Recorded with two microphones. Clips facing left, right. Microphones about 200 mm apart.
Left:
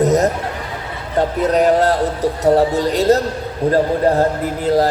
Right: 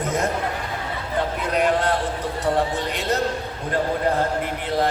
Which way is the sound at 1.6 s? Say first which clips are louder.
Left 6 dB; 40° left (ahead or behind).